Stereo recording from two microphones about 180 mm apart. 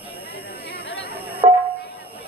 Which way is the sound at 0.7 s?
60° right (ahead or behind).